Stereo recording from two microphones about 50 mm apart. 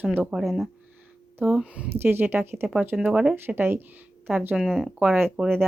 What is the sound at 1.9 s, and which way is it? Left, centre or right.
Speech, right.